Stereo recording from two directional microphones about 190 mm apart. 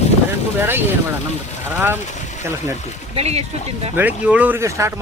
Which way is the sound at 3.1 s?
35° right (ahead or behind).